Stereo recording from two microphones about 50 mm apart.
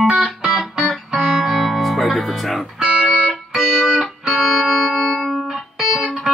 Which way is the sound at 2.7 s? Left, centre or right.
Centre.